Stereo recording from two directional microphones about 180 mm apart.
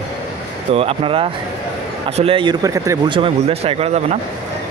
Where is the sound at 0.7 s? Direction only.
30° right (ahead or behind).